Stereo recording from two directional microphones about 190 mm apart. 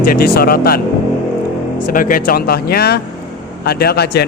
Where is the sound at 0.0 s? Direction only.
50° left (ahead or behind).